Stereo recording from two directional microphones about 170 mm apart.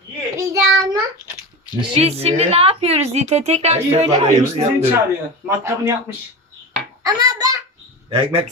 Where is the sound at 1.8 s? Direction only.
35° right (ahead or behind).